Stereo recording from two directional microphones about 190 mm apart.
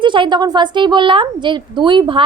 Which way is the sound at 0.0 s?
25° right (ahead or behind).